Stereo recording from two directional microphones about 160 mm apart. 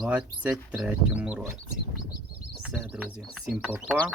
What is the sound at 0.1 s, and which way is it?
Speech, 10° right (ahead or behind).